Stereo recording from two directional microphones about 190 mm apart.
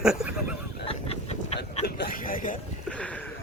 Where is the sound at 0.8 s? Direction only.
30° left (ahead or behind).